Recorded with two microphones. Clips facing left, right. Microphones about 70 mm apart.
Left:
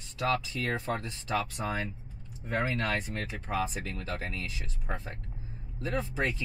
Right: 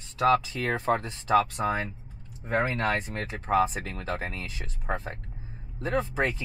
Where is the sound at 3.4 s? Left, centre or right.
Right.